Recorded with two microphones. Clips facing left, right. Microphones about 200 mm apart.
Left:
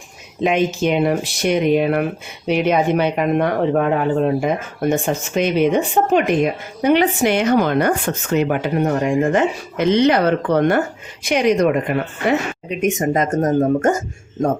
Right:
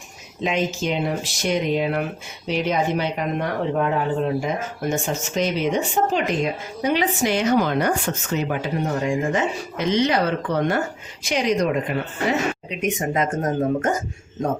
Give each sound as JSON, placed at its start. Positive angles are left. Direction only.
{"t": 0.4, "sound": "speech", "side_deg": 60}
{"t": 12.6, "sound": "speech", "side_deg": 45}